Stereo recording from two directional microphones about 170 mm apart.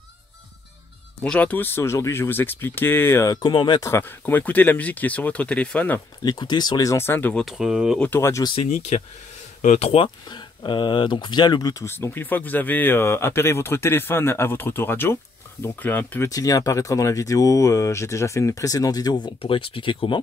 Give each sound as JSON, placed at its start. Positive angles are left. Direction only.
{"t": 1.2, "sound": "speech", "side_deg": 5}
{"t": 3.9, "sound": "speech", "side_deg": 10}
{"t": 6.2, "sound": "speech", "side_deg": 25}
{"t": 7.4, "sound": "speech", "side_deg": -5}
{"t": 8.0, "sound": "speech", "side_deg": 15}
{"t": 8.6, "sound": "speech", "side_deg": 45}
{"t": 16.3, "sound": "speech", "side_deg": 20}